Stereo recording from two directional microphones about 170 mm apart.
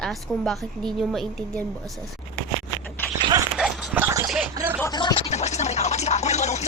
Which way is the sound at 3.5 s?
5° right (ahead or behind).